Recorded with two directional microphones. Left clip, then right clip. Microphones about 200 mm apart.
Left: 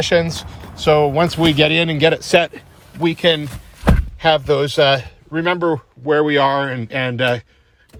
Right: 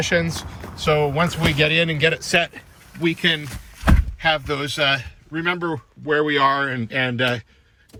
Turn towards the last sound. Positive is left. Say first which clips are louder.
# left 3 dB
turn(degrees=10)  # may be behind; listen again after turning